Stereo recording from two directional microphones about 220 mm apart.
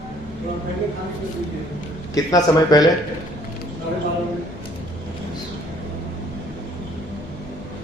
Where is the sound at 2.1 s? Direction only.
15° left (ahead or behind).